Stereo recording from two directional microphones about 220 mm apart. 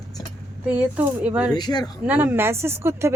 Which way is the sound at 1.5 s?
20° left (ahead or behind).